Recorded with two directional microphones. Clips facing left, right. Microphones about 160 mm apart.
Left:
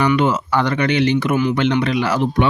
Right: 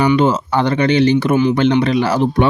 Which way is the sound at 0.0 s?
30° right (ahead or behind).